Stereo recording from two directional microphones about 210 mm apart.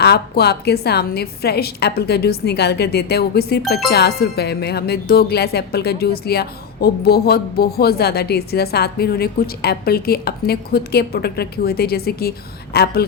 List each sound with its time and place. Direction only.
0.0 s speech: 50° left (ahead or behind)